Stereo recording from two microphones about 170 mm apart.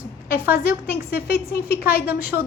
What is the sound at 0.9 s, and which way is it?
Speech, 65° left (ahead or behind).